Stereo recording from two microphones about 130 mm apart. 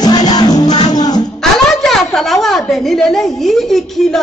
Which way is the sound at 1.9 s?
Centre (ahead or behind).